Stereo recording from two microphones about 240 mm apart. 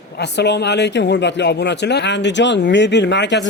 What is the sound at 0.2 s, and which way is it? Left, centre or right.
A man's voice, left.